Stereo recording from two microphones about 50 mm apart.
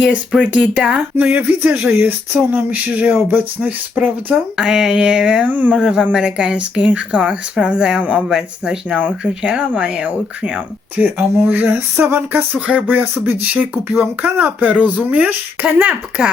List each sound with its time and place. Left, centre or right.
0.0 s speech: right
1.2 s speech: right
4.5 s a sound: centre
5.5 s speech: right
5.7 s a sound: centre
6.1 s speech: centre
8.3 s a sound: centre
9.2 s speech: right
11.0 s speech: right
12.5 s speech: right